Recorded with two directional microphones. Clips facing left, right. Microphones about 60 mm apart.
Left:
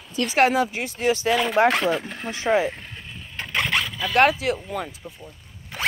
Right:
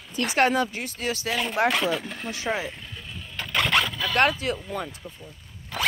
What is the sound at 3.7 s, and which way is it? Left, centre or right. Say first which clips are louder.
Speech: left 3 dB; centre.